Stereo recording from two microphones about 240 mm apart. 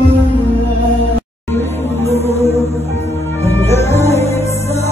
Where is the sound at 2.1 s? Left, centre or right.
Left.